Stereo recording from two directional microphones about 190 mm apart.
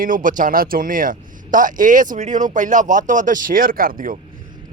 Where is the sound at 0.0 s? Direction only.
45° right (ahead or behind).